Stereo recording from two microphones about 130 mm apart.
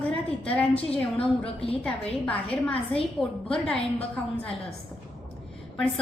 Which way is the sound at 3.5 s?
5° left (ahead or behind).